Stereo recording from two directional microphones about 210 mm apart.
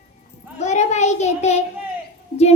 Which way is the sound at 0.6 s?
35° left (ahead or behind).